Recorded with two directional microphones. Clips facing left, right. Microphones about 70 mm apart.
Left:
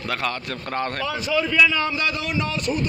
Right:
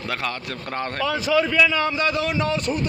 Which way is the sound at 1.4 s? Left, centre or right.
Right.